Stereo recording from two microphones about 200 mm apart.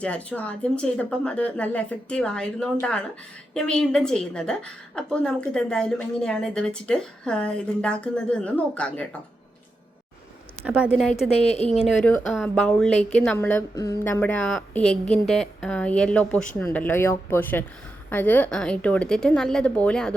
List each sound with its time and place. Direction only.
0.0 s a woman's voice: 5° left (ahead or behind)
10.6 s a woman's voice: 5° right (ahead or behind)
11.3 s a woman's voice: 30° left (ahead or behind)
12.0 s a woman's voice: centre (ahead or behind)